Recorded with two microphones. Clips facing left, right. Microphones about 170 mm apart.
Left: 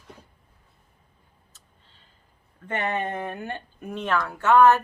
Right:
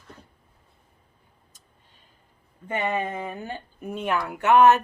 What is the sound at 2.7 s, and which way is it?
Speech, 10° right (ahead or behind).